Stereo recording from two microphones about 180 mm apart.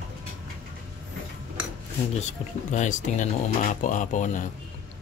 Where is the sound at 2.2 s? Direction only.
40° left (ahead or behind).